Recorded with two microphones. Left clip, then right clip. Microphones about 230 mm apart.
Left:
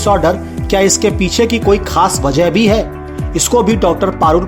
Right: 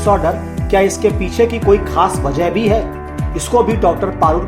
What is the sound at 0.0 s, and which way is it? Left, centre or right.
Speech, left.